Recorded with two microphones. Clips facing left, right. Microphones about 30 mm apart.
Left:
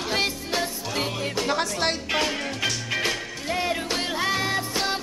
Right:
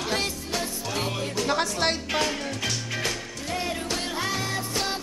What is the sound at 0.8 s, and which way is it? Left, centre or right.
Music, centre.